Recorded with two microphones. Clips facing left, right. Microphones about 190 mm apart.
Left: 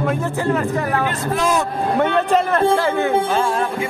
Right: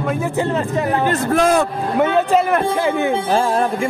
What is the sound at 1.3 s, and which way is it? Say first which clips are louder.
Speech: right 4 dB; 55° right (ahead or behind).